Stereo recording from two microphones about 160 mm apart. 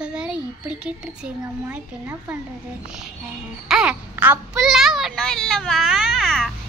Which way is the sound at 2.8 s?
5° right (ahead or behind).